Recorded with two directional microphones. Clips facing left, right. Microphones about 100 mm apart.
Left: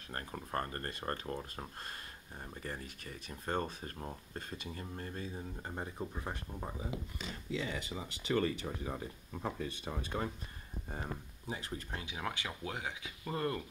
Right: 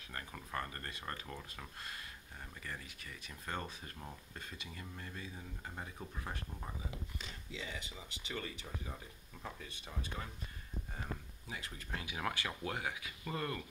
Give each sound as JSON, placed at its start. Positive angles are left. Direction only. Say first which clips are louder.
{"t": 0.1, "sound": "speech", "louder": "left 4 dB", "side_deg": 40}
{"t": 7.5, "sound": "speech", "louder": "left 8 dB", "side_deg": 60}
{"t": 11.4, "sound": "speech", "louder": "left 6 dB", "side_deg": 30}
{"t": 12.2, "sound": "speech", "louder": "right 1 dB", "side_deg": 10}